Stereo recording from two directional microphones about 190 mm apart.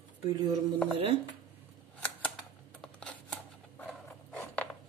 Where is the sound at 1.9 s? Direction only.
5° left (ahead or behind).